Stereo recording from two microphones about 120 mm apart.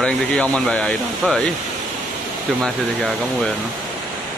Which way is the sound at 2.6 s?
5° left (ahead or behind).